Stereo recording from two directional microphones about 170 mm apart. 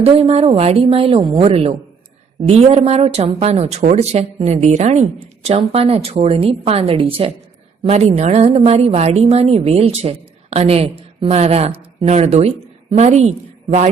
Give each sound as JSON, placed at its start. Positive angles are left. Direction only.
{"t": 0.0, "sound": "a woman's voice", "side_deg": -35}